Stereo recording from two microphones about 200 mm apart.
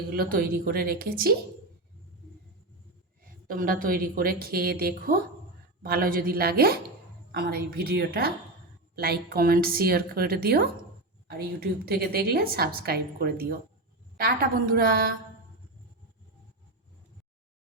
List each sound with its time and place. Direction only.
0.1 s a woman's voice: 45° right (ahead or behind)
3.2 s a woman's voice: 45° right (ahead or behind)
11.9 s a woman's voice: 50° right (ahead or behind)